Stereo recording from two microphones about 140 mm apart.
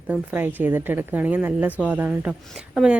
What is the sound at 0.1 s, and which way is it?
Speech, 15° right (ahead or behind).